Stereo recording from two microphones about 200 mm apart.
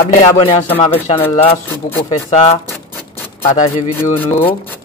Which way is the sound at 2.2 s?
35° left (ahead or behind).